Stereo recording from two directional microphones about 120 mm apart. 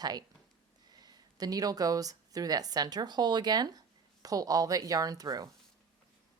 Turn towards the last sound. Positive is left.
turn(degrees=-30)  # may be behind; listen again after turning